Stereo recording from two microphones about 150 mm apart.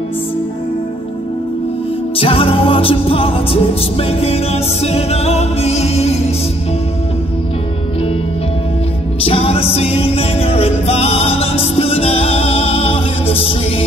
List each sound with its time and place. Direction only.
2.1 s music: 40° left (ahead or behind)
9.2 s music: 40° left (ahead or behind)